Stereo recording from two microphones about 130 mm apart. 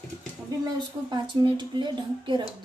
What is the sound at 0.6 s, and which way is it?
A woman's voice, 35° right (ahead or behind).